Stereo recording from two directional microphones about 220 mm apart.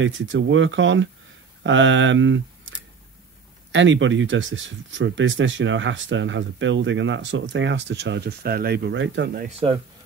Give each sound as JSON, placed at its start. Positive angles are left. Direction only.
{"t": 0.0, "sound": "speech", "side_deg": -60}
{"t": 3.7, "sound": "speech", "side_deg": -60}
{"t": 9.5, "sound": "speech", "side_deg": -25}